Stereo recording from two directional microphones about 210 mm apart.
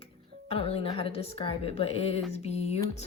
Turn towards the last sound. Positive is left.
turn(degrees=30)  # may be behind; listen again after turning